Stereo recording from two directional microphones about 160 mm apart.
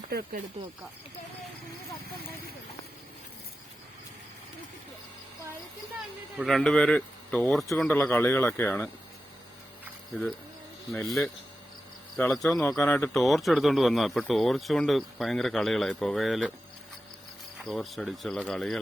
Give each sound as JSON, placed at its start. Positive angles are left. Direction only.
{"t": 0.1, "sound": "speech", "side_deg": -70}
{"t": 6.3, "sound": "speech", "side_deg": 0}
{"t": 12.1, "sound": "speech", "side_deg": 5}
{"t": 12.6, "sound": "speech", "side_deg": 15}
{"t": 13.1, "sound": "speech", "side_deg": 0}
{"t": 17.6, "sound": "speech", "side_deg": 0}